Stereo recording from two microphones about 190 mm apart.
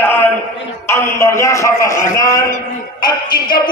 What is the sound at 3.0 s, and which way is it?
Music, 25° left (ahead or behind).